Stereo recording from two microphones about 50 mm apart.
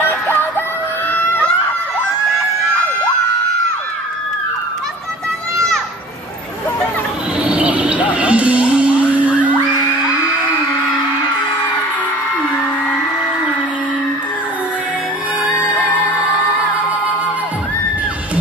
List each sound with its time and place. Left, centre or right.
0.0 s music: left
1.1 s a sound: left
7.4 s music: right